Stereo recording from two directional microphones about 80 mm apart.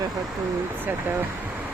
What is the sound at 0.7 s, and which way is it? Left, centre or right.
Speech, right.